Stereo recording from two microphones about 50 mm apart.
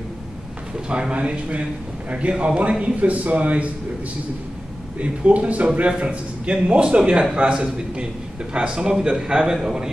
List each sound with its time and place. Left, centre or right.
0.8 s a man's voice: centre
5.0 s a man's voice: right